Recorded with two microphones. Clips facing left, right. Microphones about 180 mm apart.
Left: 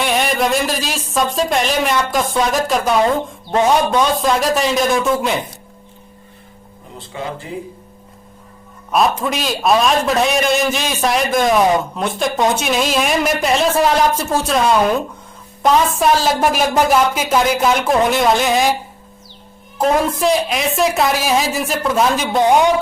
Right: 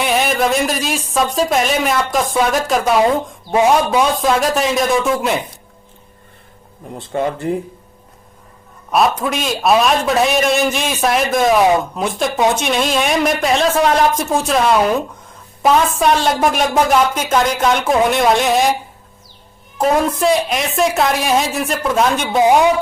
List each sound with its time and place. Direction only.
0.0 s a man's voice: centre (ahead or behind)
7.1 s speech: 50° right (ahead or behind)
9.2 s a man's voice: centre (ahead or behind)
19.8 s a man's voice: centre (ahead or behind)